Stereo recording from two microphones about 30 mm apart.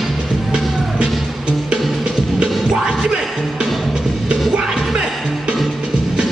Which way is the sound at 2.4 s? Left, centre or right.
Right.